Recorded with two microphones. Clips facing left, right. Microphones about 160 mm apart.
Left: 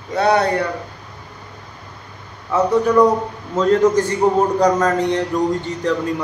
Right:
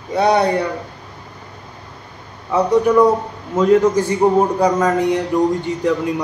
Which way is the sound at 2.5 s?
10° right (ahead or behind).